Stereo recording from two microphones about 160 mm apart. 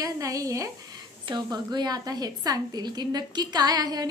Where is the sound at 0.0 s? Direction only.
20° right (ahead or behind).